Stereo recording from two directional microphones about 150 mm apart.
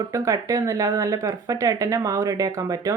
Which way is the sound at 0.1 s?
20° right (ahead or behind).